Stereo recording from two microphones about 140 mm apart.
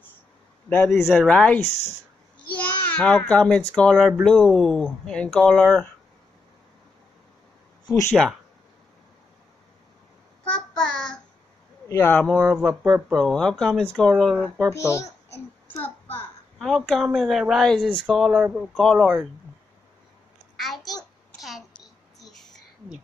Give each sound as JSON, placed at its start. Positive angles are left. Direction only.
{"t": 0.8, "sound": "a child's voice", "side_deg": 0}
{"t": 7.8, "sound": "speech", "side_deg": 20}
{"t": 8.1, "sound": "speech", "side_deg": 0}
{"t": 10.4, "sound": "child singing", "side_deg": 5}
{"t": 11.9, "sound": "speech", "side_deg": 15}
{"t": 12.5, "sound": "speech", "side_deg": 0}
{"t": 14.7, "sound": "a child's voice", "side_deg": 20}
{"t": 15.7, "sound": "child singing", "side_deg": 15}
{"t": 16.5, "sound": "speech", "side_deg": 0}
{"t": 20.5, "sound": "a sound", "side_deg": 0}